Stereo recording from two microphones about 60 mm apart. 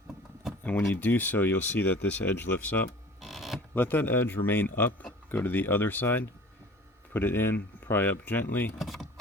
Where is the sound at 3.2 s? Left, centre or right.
Centre.